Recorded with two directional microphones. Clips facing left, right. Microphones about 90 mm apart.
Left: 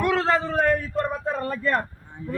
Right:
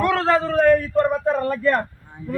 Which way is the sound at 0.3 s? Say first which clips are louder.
Right 6 dB; centre (ahead or behind).